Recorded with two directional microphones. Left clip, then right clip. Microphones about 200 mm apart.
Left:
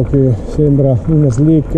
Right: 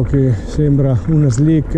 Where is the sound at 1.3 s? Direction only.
25° right (ahead or behind).